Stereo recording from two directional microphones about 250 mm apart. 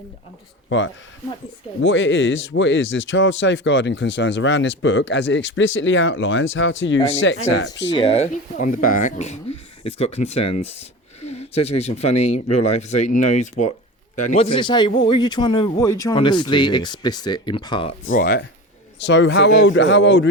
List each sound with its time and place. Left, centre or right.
0.7 s speech: left
7.9 s speech: left
10.5 s speech: left
11.2 s speech: left
14.2 s speech: left
18.1 s speech: left